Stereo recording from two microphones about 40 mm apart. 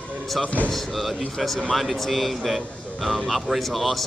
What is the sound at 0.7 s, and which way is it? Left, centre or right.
Speech, centre.